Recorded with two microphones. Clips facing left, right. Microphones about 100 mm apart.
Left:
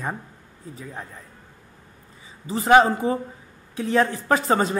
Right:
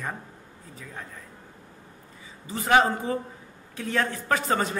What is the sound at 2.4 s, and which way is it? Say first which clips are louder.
A woman's voice: left 5 dB; 30° left (ahead or behind).